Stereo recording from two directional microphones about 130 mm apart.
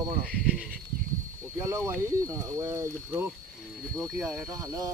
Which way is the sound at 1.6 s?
25° right (ahead or behind).